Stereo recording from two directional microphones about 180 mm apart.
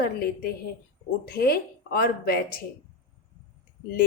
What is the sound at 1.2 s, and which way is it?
A woman's voice, 60° left (ahead or behind).